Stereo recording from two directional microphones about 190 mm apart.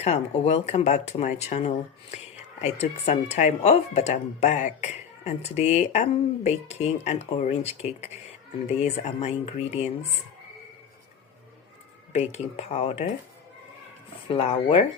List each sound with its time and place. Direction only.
0.0 s speech: 35° left (ahead or behind)
12.1 s speech: 35° left (ahead or behind)
14.3 s speech: 30° left (ahead or behind)